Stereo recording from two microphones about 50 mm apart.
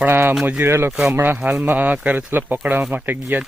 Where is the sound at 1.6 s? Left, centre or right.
Right.